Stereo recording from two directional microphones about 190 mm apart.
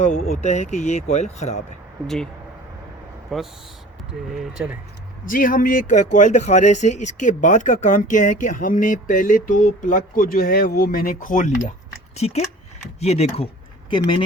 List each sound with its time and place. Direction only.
0.0 s speech: 40° left (ahead or behind)
2.0 s speech: 5° left (ahead or behind)
3.3 s speech: centre (ahead or behind)
5.2 s speech: 45° left (ahead or behind); by 14.2 s 25° left (ahead or behind)